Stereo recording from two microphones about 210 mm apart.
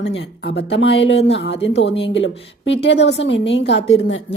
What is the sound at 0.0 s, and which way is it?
Speech, 55° left (ahead or behind).